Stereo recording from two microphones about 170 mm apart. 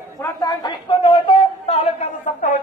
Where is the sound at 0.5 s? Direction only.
25° left (ahead or behind).